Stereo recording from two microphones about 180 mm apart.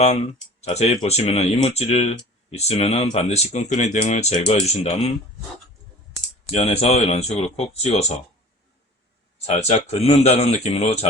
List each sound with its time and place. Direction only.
0.0 s speech: 40° left (ahead or behind)
6.5 s speech: 35° left (ahead or behind)
9.5 s speech: 35° left (ahead or behind)